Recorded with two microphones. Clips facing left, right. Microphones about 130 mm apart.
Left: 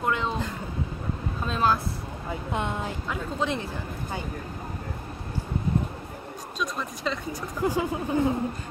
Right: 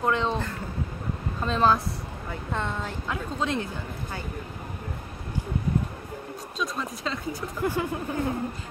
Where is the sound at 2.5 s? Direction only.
15° left (ahead or behind).